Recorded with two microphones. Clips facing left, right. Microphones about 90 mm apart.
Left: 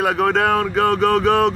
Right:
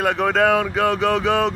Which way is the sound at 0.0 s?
Centre (ahead or behind).